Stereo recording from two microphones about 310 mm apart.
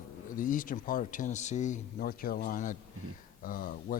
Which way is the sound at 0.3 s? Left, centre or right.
Left.